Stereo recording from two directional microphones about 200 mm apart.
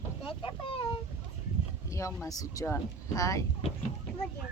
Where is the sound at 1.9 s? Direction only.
15° left (ahead or behind).